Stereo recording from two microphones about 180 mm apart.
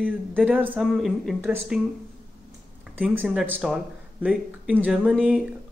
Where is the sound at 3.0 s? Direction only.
10° right (ahead or behind).